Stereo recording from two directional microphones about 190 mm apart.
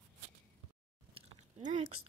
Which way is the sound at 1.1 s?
35° right (ahead or behind).